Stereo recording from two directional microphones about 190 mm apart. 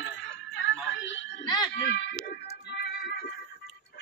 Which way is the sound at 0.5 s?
70° left (ahead or behind).